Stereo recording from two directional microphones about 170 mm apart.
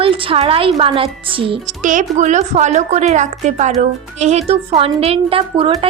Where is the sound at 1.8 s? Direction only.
50° right (ahead or behind).